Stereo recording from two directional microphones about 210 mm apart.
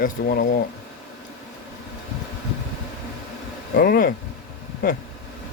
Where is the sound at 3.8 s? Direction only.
45° left (ahead or behind).